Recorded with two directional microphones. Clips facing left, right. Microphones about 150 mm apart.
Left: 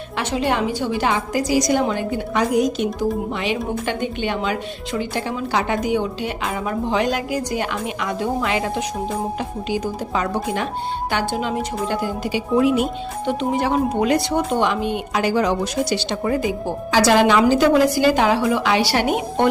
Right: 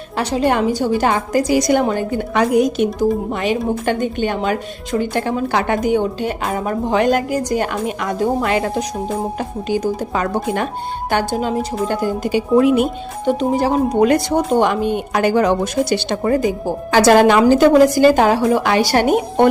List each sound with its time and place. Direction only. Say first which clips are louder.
0.2 s a woman's voice: right 4 dB; 40° right (ahead or behind); by 13.3 s 55° right (ahead or behind)
13.4 s a woman's voice: right 2 dB; 40° right (ahead or behind)